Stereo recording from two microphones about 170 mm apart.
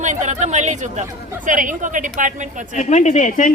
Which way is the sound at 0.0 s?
45° right (ahead or behind).